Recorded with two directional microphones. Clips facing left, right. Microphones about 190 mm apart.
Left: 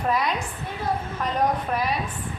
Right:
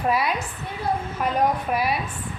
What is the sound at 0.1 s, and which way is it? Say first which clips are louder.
Speech: even; 5° right (ahead or behind).